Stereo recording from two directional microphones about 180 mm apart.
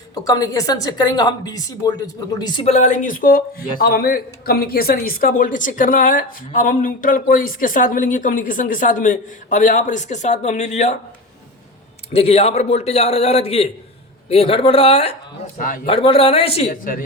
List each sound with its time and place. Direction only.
0.1 s a woman's voice: 20° left (ahead or behind)
2.7 s a man's voice: 40° left (ahead or behind)
12.1 s a man's voice: 35° left (ahead or behind)
15.5 s a man's voice: 50° left (ahead or behind)
15.9 s a man's voice: 35° left (ahead or behind)